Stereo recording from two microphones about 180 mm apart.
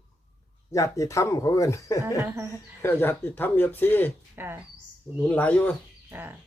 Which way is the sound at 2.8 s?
10° left (ahead or behind).